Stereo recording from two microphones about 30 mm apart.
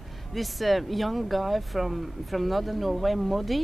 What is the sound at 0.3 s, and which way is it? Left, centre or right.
Speech, centre.